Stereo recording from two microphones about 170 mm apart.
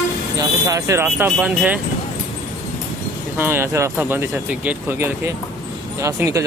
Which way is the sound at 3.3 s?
15° right (ahead or behind).